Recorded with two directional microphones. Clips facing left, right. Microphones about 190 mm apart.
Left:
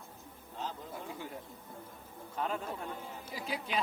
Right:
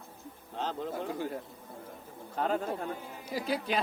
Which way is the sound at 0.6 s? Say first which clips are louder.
Right 7 dB; 75° right (ahead or behind).